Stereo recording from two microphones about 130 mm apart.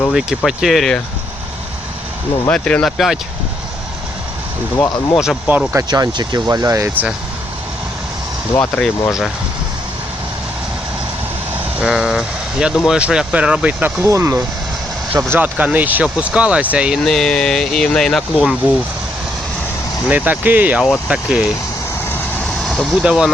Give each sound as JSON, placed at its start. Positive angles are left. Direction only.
{"t": 0.1, "sound": "speech", "side_deg": -5}
{"t": 2.5, "sound": "speech", "side_deg": 10}
{"t": 5.1, "sound": "speech", "side_deg": 0}
{"t": 5.7, "sound": "speech", "side_deg": -30}
{"t": 8.7, "sound": "speech", "side_deg": 5}
{"t": 11.8, "sound": "speech", "side_deg": -5}
{"t": 14.0, "sound": "speech", "side_deg": -20}
{"t": 15.3, "sound": "speech", "side_deg": -10}
{"t": 17.1, "sound": "speech", "side_deg": 5}
{"t": 18.3, "sound": "speech", "side_deg": -10}
{"t": 20.1, "sound": "speech", "side_deg": -10}
{"t": 22.4, "sound": "vehicle", "side_deg": 0}
{"t": 23.0, "sound": "speech", "side_deg": -5}